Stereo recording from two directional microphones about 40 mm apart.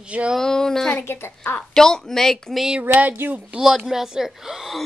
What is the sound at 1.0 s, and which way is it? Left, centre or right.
Speech, left.